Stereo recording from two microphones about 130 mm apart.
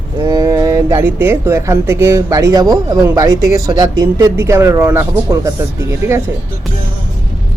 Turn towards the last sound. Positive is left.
turn(degrees=-20)  # may be behind; listen again after turning